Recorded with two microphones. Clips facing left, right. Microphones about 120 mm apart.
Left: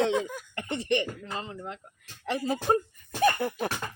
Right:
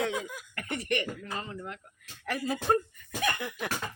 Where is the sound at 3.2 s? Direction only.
40° left (ahead or behind).